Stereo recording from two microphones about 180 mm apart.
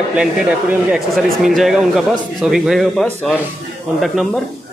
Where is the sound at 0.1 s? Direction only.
5° right (ahead or behind).